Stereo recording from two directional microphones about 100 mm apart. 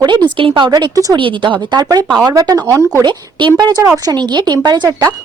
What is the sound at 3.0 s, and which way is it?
A woman's voice, 50° right (ahead or behind).